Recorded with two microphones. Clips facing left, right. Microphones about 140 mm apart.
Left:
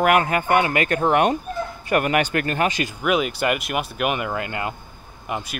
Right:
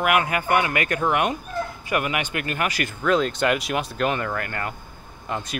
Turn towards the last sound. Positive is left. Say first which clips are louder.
# left 1 dB
turn(degrees=10)  # may be behind; listen again after turning